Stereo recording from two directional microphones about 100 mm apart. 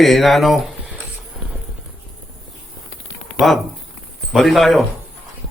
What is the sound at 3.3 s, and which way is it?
Speech, centre (ahead or behind).